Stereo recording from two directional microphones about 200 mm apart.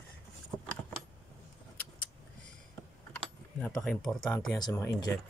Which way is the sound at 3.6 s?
5° left (ahead or behind).